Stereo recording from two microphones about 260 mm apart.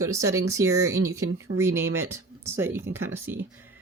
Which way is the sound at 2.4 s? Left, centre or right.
Centre.